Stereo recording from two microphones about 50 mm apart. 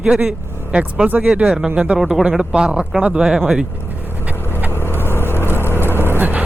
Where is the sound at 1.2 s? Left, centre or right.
Centre.